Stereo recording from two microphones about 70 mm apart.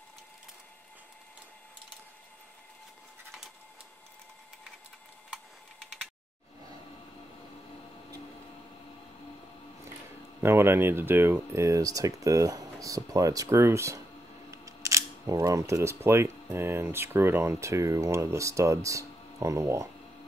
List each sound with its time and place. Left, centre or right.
10.4 s speech: right
13.5 s speech: right